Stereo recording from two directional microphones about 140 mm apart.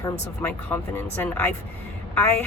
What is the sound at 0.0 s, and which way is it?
Speech, 15° left (ahead or behind).